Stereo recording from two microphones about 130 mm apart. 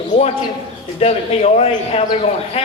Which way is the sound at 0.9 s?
55° left (ahead or behind).